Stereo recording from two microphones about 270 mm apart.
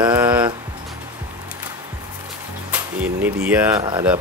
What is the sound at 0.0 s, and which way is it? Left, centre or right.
Music, centre.